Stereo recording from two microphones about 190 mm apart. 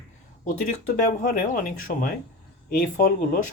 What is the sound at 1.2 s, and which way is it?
Speech, 45° left (ahead or behind).